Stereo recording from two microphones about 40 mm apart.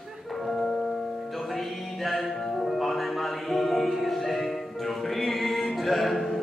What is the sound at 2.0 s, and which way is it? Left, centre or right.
Music, centre.